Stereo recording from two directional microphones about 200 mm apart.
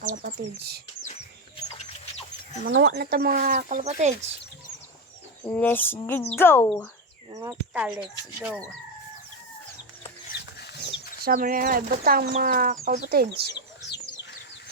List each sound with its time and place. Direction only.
0.0 s speech: 40° right (ahead or behind)
2.6 s speech: 65° right (ahead or behind); by 4.1 s 35° right (ahead or behind)
5.5 s bird: 10° left (ahead or behind)
7.3 s speech: 15° right (ahead or behind)
7.7 s speech: 5° right (ahead or behind)
10.8 s speech: 50° right (ahead or behind)